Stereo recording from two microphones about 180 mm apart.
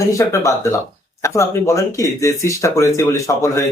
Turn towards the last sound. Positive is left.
turn(degrees=15)  # may be behind; listen again after turning